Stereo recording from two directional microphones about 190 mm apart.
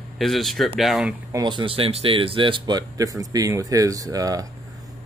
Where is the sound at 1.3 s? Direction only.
20° right (ahead or behind).